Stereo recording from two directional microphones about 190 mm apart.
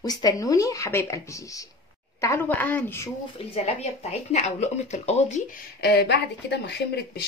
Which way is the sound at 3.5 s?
35° left (ahead or behind).